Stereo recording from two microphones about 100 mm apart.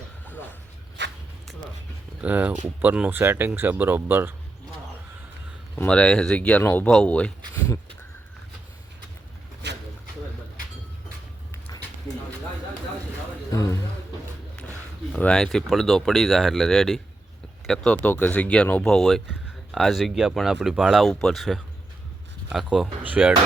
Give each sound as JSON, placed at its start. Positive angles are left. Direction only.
{"t": 2.2, "sound": "speech", "side_deg": -15}
{"t": 5.7, "sound": "speech", "side_deg": 10}
{"t": 6.8, "sound": "speech", "side_deg": 10}
{"t": 13.5, "sound": "a man's voice", "side_deg": 35}
{"t": 15.1, "sound": "speech", "side_deg": 10}
{"t": 18.0, "sound": "speech", "side_deg": 15}